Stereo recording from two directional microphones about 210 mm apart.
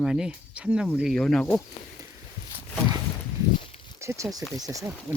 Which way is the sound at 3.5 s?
25° left (ahead or behind).